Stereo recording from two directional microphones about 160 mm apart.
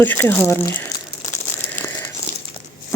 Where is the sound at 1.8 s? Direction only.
15° left (ahead or behind).